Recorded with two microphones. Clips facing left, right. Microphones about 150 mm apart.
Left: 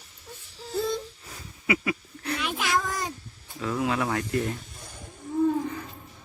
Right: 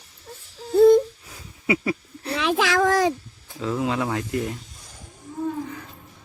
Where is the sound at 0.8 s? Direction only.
55° right (ahead or behind).